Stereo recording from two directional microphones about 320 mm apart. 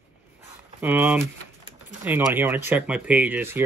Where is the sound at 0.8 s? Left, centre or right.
Centre.